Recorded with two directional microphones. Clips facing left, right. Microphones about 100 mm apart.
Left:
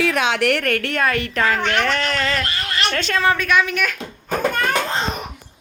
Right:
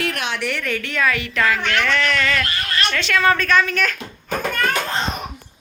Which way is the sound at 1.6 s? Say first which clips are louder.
Even; 30° left (ahead or behind).